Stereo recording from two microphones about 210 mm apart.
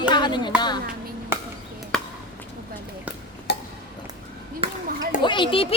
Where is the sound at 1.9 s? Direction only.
Centre (ahead or behind).